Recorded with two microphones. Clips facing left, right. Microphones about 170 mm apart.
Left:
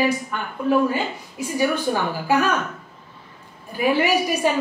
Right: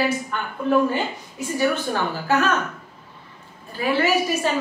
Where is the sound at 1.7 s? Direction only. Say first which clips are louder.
Left 2 dB; 10° left (ahead or behind).